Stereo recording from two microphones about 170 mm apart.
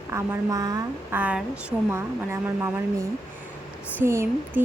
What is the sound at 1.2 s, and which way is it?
Speech, 10° right (ahead or behind).